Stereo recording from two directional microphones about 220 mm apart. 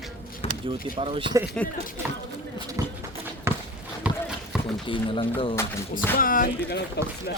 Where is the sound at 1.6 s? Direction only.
40° left (ahead or behind).